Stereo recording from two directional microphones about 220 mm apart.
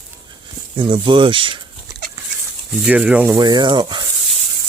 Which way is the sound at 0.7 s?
20° right (ahead or behind).